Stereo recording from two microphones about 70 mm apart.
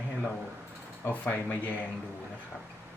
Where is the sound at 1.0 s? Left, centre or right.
Left.